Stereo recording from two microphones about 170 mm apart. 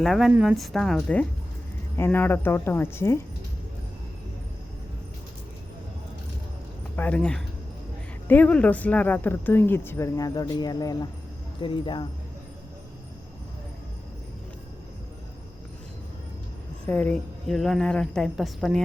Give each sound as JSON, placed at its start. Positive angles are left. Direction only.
{"t": 0.0, "sound": "a woman's voice", "side_deg": 0}
{"t": 6.9, "sound": "speech", "side_deg": 10}
{"t": 16.8, "sound": "a woman's voice", "side_deg": 10}